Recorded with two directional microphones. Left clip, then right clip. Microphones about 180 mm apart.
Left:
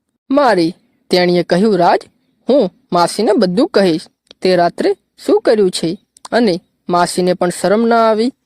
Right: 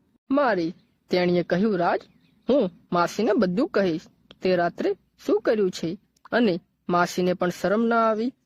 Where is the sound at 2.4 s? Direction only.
25° left (ahead or behind).